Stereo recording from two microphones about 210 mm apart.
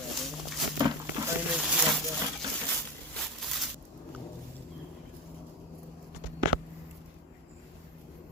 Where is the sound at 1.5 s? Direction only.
Centre (ahead or behind).